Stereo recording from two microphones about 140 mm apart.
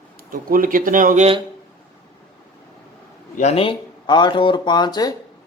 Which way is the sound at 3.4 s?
45° left (ahead or behind).